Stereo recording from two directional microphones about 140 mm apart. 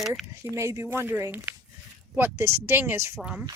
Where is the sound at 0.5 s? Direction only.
20° right (ahead or behind).